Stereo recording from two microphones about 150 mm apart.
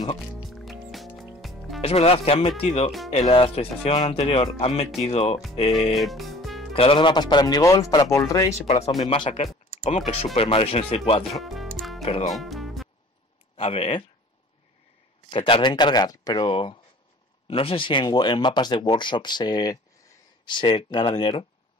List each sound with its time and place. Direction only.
0.5 s music: centre (ahead or behind)
1.8 s speech: 45° left (ahead or behind)
5.9 s music: centre (ahead or behind)
6.7 s speech: 40° left (ahead or behind); by 8.5 s 20° left (ahead or behind)
9.0 s speech: 35° left (ahead or behind)
11.3 s speech: centre (ahead or behind)
12.0 s speech: 45° left (ahead or behind)
12.3 s music: centre (ahead or behind)
13.6 s speech: 40° left (ahead or behind)
15.2 s speech: 35° left (ahead or behind)